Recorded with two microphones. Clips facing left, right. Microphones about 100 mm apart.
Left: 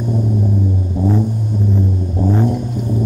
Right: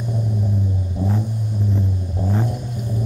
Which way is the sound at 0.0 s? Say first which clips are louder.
Left 7 dB; 35° left (ahead or behind).